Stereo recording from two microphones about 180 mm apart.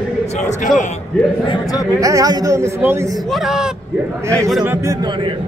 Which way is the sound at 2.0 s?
20° right (ahead or behind).